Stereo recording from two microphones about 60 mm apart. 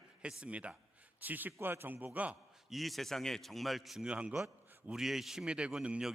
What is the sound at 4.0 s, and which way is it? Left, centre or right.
Speech, centre.